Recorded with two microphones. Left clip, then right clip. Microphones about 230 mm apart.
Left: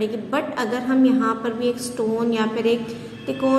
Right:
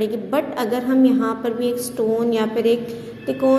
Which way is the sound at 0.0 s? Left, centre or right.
Centre.